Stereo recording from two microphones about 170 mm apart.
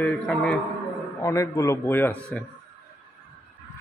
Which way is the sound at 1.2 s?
20° left (ahead or behind).